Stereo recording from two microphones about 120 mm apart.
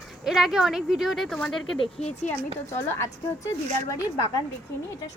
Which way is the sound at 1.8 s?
65° left (ahead or behind).